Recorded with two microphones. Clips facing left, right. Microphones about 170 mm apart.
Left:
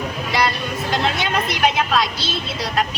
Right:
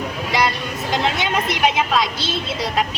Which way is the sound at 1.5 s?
20° right (ahead or behind).